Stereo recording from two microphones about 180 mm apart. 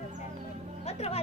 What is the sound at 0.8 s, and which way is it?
Speech, 35° left (ahead or behind).